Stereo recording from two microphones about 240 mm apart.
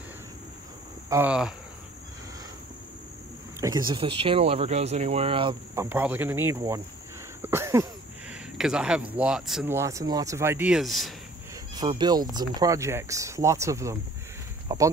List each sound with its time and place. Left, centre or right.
1.1 s speech: centre
3.6 s speech: centre
5.9 s speech: centre
7.4 s a sound: centre
8.5 s speech: centre
11.7 s speech: centre